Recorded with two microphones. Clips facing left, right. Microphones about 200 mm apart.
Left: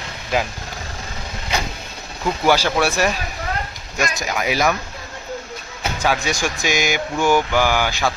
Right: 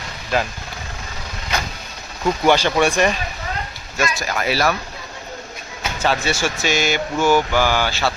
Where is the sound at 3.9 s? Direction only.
15° left (ahead or behind).